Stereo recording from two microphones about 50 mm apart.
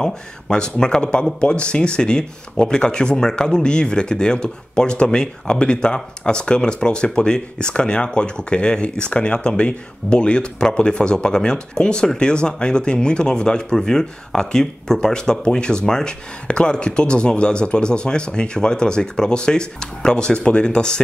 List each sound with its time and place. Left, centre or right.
0.0 s speech: centre